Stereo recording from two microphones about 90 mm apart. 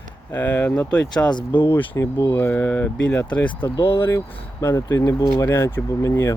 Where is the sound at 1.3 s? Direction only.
60° left (ahead or behind).